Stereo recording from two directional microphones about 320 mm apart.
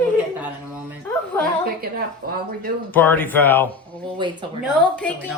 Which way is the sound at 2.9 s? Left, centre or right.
Centre.